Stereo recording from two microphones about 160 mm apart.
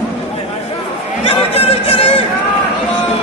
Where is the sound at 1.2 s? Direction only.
35° left (ahead or behind).